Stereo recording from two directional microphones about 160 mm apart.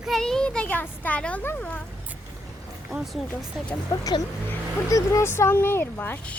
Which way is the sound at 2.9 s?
Centre (ahead or behind).